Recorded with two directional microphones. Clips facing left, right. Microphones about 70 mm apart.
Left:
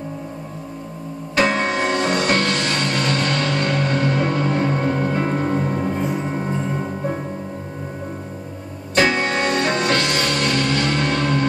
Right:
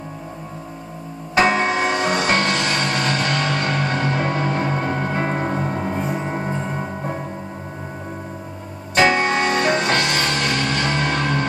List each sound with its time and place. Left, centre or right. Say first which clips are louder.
1.3 s music: right 2 dB; right
8.9 s music: right 2 dB; right